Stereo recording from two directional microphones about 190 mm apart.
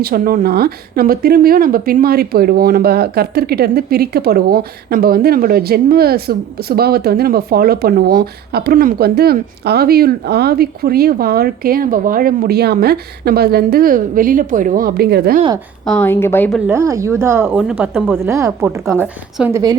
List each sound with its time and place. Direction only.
0.0 s speech: 50° right (ahead or behind)
15.9 s a woman's voice: 10° left (ahead or behind)
16.6 s a woman's voice: 15° right (ahead or behind)
17.6 s speech: 5° right (ahead or behind)
18.2 s a woman's voice: 15° right (ahead or behind)